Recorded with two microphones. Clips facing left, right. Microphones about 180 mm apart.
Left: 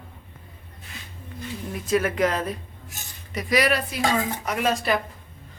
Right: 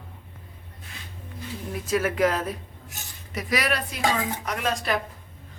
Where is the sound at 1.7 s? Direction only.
5° right (ahead or behind).